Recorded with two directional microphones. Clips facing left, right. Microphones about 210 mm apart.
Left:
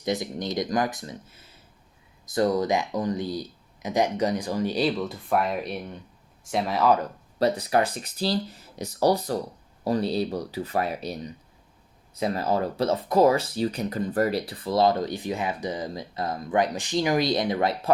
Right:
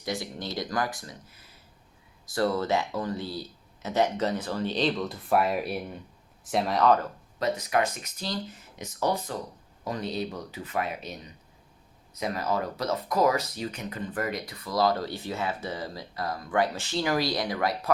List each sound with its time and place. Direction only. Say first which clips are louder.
0.0 s speech: left 5 dB; 20° left (ahead or behind)
7.3 s speech: left 4 dB; 35° left (ahead or behind)